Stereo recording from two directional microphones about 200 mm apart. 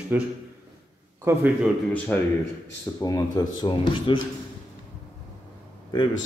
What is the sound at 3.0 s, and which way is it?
Speech, 20° left (ahead or behind).